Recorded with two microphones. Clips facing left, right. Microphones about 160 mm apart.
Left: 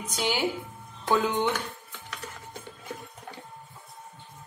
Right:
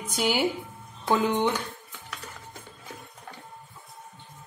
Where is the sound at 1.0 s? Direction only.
15° right (ahead or behind).